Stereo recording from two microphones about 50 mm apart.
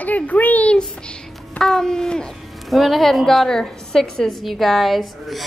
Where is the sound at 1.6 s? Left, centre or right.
Centre.